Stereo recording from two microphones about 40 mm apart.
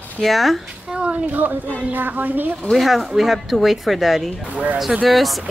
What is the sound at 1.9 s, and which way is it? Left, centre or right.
Speech, right.